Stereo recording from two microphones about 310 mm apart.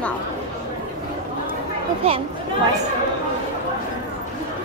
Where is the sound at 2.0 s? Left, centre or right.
Centre.